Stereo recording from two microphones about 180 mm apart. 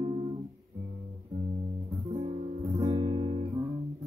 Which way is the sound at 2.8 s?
25° right (ahead or behind).